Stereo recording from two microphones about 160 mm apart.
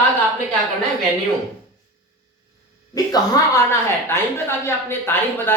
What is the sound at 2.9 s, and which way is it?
Speech, 25° left (ahead or behind).